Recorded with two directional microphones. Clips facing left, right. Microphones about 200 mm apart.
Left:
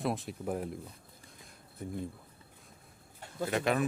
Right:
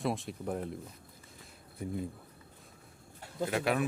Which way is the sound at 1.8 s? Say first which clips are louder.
Right 2 dB; 10° right (ahead or behind).